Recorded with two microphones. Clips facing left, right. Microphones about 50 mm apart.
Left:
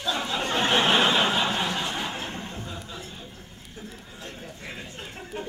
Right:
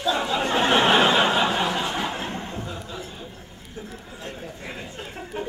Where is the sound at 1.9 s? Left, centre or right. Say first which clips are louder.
Right 4 dB; centre.